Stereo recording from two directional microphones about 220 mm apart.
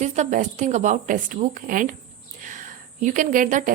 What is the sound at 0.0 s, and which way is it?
A woman's voice, 30° right (ahead or behind).